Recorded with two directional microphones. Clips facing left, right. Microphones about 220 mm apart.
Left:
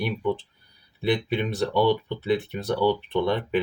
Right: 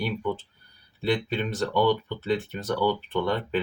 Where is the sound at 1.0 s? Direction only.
15° left (ahead or behind).